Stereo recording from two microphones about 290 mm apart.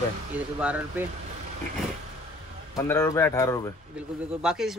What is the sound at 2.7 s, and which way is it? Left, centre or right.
Speech, centre.